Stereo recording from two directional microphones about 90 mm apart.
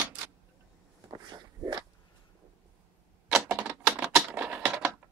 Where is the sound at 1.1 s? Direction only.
50° right (ahead or behind).